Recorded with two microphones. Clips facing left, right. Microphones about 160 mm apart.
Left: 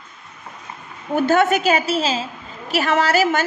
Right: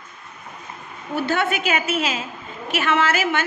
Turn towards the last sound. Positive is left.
turn(degrees=40)  # may be behind; listen again after turning